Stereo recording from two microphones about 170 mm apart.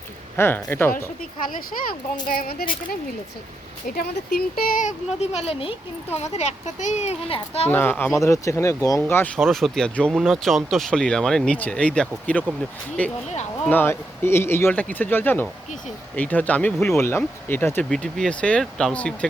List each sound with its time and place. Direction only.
0.3 s speech: 15° left (ahead or behind)
1.5 s a child's voice: 55° left (ahead or behind); by 7.7 s 35° left (ahead or behind)
7.7 s speech: 10° left (ahead or behind)